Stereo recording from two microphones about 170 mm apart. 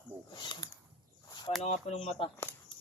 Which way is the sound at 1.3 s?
25° left (ahead or behind).